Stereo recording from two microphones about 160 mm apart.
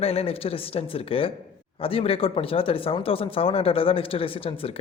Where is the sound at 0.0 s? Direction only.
40° left (ahead or behind).